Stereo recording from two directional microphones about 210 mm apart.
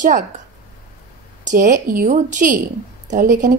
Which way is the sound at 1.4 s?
40° right (ahead or behind).